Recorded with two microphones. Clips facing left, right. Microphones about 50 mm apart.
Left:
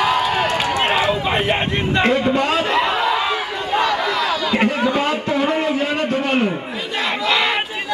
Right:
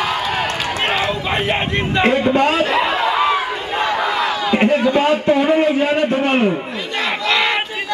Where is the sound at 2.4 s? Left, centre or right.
Right.